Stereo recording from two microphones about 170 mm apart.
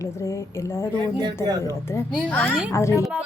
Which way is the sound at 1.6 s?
15° left (ahead or behind).